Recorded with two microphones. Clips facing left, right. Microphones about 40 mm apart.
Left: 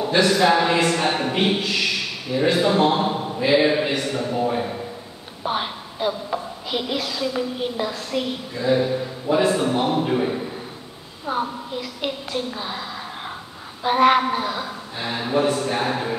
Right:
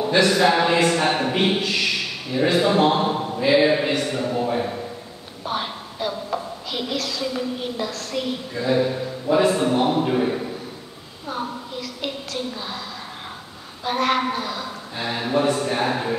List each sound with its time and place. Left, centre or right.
0.0 s a man's voice: centre
5.4 s a woman's voice: centre
11.2 s a woman's voice: centre
13.8 s speech: centre
15.0 s a man's voice: centre